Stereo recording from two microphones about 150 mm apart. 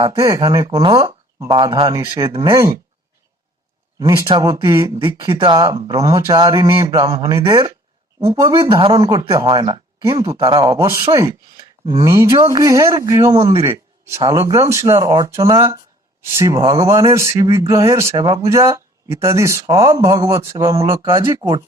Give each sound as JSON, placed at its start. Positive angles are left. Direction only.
{"t": 0.0, "sound": "speech", "side_deg": -30}
{"t": 4.0, "sound": "speech", "side_deg": -20}
{"t": 4.3, "sound": "speech", "side_deg": -30}
{"t": 5.0, "sound": "speech", "side_deg": -30}
{"t": 6.9, "sound": "speech", "side_deg": -35}
{"t": 7.2, "sound": "speech", "side_deg": -20}
{"t": 7.5, "sound": "speech", "side_deg": -35}
{"t": 8.3, "sound": "speech", "side_deg": -25}
{"t": 8.5, "sound": "speech", "side_deg": -35}
{"t": 10.3, "sound": "speech", "side_deg": -35}
{"t": 10.6, "sound": "speech", "side_deg": -20}
{"t": 13.7, "sound": "a sound", "side_deg": -15}
{"t": 14.2, "sound": "speech", "side_deg": -25}